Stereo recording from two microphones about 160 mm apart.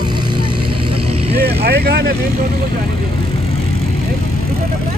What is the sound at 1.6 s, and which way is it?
Vehicle, 75° right (ahead or behind).